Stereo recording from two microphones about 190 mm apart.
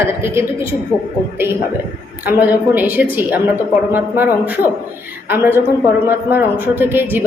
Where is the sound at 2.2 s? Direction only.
10° right (ahead or behind).